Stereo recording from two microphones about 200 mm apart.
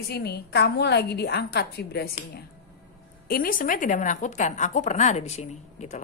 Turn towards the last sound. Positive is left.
turn(degrees=35)  # may be behind; listen again after turning